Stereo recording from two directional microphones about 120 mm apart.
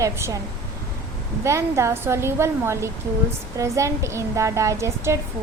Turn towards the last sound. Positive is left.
turn(degrees=-25)  # may be behind; listen again after turning